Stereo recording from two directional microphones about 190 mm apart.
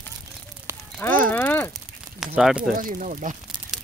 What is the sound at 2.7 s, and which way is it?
Speech, 45° right (ahead or behind).